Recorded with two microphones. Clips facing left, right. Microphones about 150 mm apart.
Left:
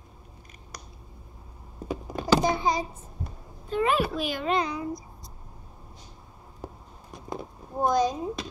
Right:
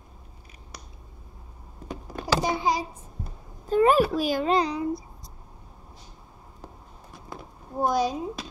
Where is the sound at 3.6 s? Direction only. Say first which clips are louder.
Right 6 dB; 40° right (ahead or behind).